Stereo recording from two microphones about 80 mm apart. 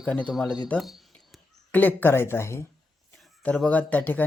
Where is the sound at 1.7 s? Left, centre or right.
Left.